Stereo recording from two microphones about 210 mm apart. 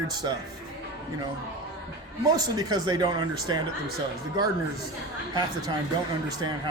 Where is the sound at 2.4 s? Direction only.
20° right (ahead or behind).